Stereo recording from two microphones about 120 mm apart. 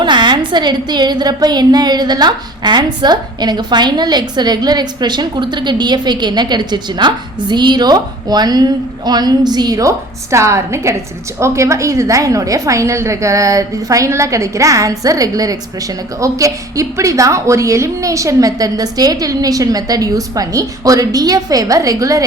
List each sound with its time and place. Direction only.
0.0 s a woman's voice: 40° right (ahead or behind)